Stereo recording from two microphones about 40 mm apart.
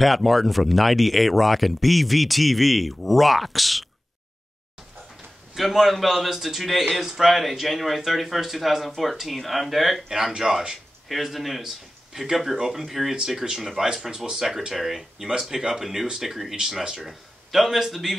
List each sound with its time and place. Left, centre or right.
0.0 s a man's voice: centre
5.5 s a man's voice: centre
10.0 s speech: centre
11.1 s a man's voice: centre